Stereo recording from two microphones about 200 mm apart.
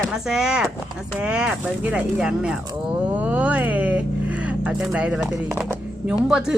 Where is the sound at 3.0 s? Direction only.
5° right (ahead or behind).